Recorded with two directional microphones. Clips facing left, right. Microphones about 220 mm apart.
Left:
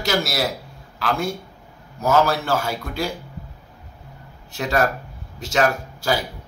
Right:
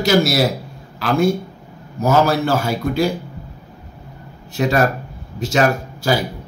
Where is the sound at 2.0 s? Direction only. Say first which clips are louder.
Right 3 dB; 10° right (ahead or behind).